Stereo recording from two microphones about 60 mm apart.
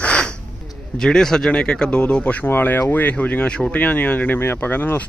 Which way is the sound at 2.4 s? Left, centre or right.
Left.